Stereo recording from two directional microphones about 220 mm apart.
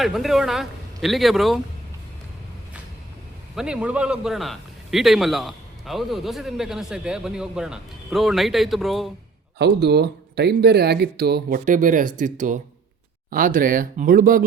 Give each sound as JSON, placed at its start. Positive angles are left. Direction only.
{"t": 0.0, "sound": "a man's voice", "side_deg": 0}
{"t": 3.5, "sound": "a man's voice", "side_deg": -5}
{"t": 9.6, "sound": "speech", "side_deg": -50}